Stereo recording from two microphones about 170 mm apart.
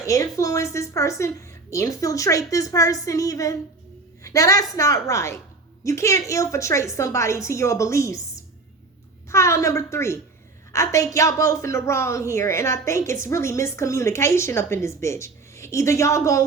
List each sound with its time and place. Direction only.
0.0 s a woman's voice: 20° left (ahead or behind)